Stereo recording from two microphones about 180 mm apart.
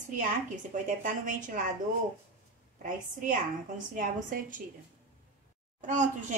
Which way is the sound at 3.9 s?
45° right (ahead or behind).